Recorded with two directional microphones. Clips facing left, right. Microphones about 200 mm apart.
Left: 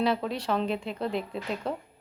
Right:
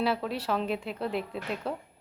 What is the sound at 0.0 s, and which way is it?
A woman's voice, 5° right (ahead or behind).